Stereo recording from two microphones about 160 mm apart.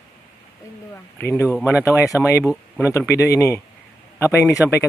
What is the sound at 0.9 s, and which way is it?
Speech, 15° left (ahead or behind).